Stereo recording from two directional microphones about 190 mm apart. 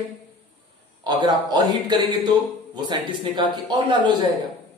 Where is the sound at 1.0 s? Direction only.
20° right (ahead or behind).